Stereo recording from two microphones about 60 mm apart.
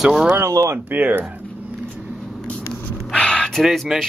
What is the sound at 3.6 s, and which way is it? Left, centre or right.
Speech, centre.